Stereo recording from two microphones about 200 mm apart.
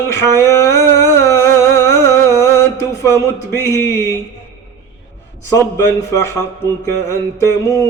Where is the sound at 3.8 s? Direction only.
10° left (ahead or behind).